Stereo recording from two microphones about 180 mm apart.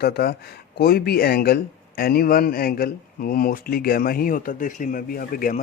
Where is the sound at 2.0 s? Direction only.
55° left (ahead or behind).